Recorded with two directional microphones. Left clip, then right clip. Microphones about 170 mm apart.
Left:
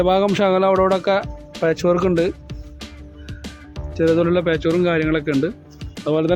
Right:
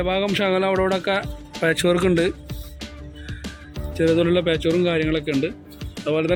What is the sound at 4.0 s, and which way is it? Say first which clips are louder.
Speech: left 2 dB; centre (ahead or behind).